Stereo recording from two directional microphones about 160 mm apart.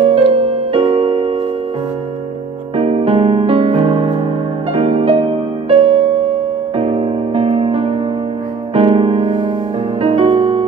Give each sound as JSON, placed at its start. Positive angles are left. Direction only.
{"t": 0.0, "sound": "music", "side_deg": -35}
{"t": 2.7, "sound": "electric piano", "side_deg": -40}
{"t": 4.7, "sound": "music", "side_deg": -35}